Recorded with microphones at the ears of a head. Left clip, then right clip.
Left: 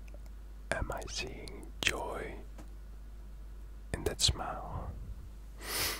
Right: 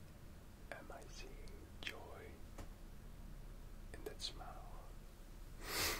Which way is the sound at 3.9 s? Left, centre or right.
Left.